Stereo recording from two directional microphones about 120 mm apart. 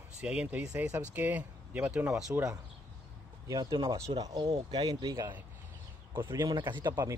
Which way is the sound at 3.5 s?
35° right (ahead or behind).